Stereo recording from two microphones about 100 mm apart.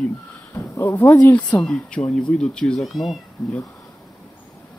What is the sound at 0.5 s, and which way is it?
Speech, 30° left (ahead or behind).